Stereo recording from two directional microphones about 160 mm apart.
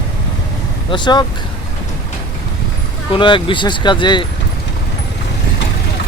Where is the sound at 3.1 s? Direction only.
30° left (ahead or behind).